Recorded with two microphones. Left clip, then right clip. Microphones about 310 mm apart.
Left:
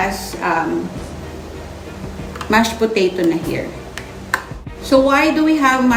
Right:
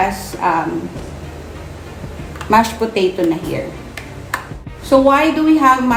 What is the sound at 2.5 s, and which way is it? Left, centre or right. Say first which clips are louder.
Speech: right 2 dB; centre.